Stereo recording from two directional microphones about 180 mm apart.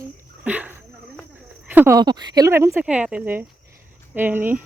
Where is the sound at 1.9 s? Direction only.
25° right (ahead or behind).